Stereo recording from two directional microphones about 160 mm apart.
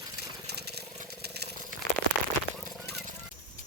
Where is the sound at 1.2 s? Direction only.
90° right.